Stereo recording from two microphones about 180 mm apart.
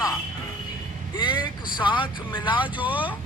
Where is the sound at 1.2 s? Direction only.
25° left (ahead or behind).